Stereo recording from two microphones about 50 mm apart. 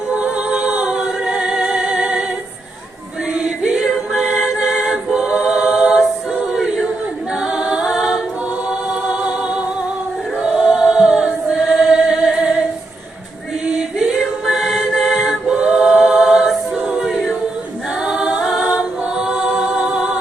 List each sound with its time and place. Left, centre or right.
0.1 s a capella: right
3.3 s music: centre
4.1 s a capella: centre
8.9 s music: right
10.3 s choir: centre
13.7 s a capella: centre
18.0 s a capella: centre
19.0 s music: centre